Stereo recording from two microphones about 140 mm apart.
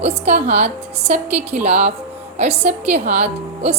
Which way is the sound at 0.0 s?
50° right (ahead or behind).